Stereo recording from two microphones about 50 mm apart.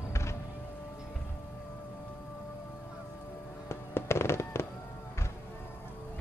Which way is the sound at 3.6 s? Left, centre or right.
Left.